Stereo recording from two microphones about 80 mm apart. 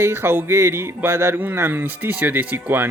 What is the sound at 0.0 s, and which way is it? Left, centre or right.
Speech, right.